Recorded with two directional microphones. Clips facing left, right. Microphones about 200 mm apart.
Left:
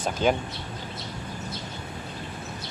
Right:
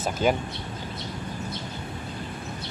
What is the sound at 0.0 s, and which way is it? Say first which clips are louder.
Speech: even; 5° right (ahead or behind).